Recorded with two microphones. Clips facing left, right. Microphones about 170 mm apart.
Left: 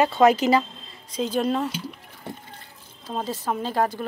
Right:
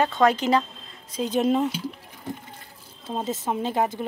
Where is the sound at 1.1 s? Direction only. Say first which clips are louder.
Right 2 dB; 15° right (ahead or behind).